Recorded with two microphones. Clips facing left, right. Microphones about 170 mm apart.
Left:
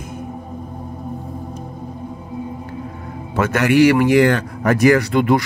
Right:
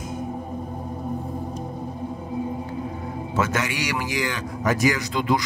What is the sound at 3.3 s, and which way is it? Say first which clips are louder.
A man's voice: left 11 dB; 60° left (ahead or behind).